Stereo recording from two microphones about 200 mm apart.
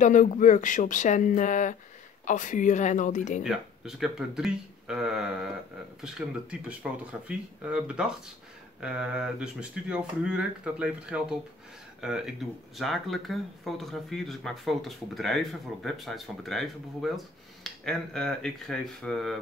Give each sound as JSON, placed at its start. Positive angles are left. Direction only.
{"t": 0.0, "sound": "speech", "side_deg": 40}
{"t": 3.4, "sound": "speech", "side_deg": 0}